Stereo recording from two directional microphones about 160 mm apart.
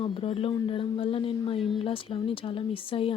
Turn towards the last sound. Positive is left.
turn(degrees=35)  # may be behind; listen again after turning